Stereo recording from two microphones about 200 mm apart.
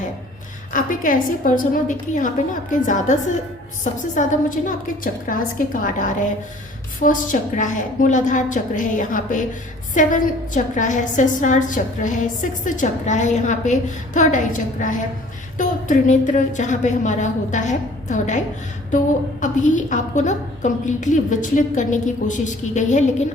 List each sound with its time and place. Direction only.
0.7 s a woman's voice: 40° left (ahead or behind)